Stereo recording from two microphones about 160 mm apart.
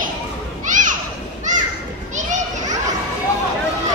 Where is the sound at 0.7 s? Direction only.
50° right (ahead or behind).